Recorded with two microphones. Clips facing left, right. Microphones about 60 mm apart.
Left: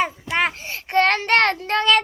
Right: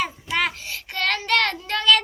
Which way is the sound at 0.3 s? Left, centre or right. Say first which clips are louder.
Left 2 dB; left.